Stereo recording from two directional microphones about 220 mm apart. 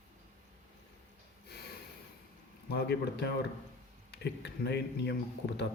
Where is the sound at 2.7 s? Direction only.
45° left (ahead or behind).